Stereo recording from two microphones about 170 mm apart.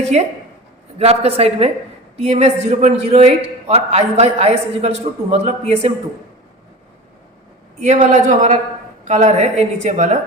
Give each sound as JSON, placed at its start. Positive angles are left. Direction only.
{"t": 0.0, "sound": "a woman's voice", "side_deg": -40}
{"t": 7.8, "sound": "a woman's voice", "side_deg": -45}